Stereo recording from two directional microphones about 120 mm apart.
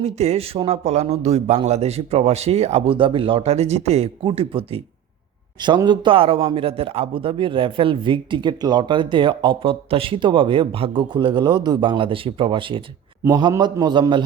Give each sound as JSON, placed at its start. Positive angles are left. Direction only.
{"t": 0.0, "sound": "a man's voice", "side_deg": -65}
{"t": 4.2, "sound": "a man's voice", "side_deg": -50}
{"t": 5.5, "sound": "a man's voice", "side_deg": -40}